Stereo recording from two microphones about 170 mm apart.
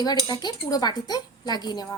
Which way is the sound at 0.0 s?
25° left (ahead or behind).